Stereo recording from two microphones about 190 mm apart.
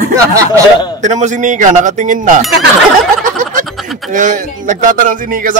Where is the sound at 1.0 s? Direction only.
40° right (ahead or behind).